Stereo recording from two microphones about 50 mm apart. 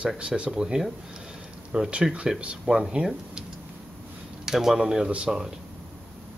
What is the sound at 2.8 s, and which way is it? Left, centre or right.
Speech, centre.